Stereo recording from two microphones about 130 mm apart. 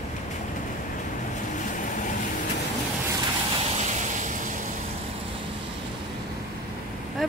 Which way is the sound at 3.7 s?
65° right (ahead or behind).